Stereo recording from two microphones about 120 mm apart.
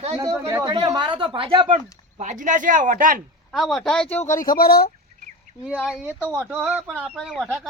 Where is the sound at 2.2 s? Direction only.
90° right.